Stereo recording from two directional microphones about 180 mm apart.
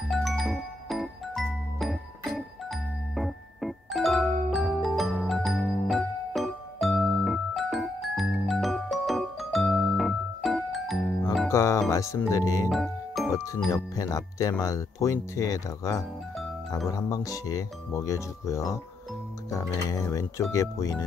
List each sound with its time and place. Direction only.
0.1 s music: centre (ahead or behind)
11.4 s speech: 15° left (ahead or behind)
12.6 s music: centre (ahead or behind)
13.3 s speech: 20° left (ahead or behind)